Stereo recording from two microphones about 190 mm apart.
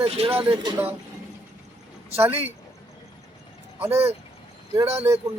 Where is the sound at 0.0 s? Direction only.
30° right (ahead or behind).